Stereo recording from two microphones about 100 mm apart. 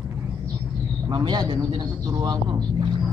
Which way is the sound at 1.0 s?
45° right (ahead or behind).